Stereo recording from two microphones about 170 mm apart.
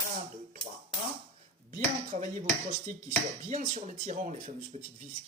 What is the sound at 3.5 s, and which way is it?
Speech, 50° right (ahead or behind).